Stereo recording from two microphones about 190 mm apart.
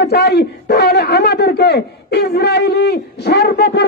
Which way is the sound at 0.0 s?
60° left (ahead or behind).